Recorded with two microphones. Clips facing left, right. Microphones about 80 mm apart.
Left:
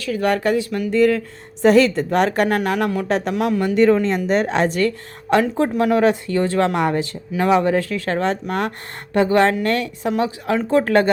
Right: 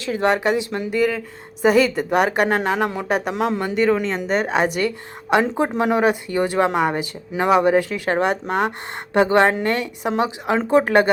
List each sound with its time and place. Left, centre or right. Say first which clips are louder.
0.0 s speech: even; right
0.9 s speech: left 6 dB; centre
2.5 s speech: left 1 dB; right
3.1 s speech: left 1 dB; centre
5.4 s speech: left 2 dB; right